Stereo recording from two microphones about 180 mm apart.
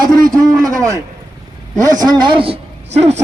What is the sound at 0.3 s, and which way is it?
A man's voice, 20° right (ahead or behind).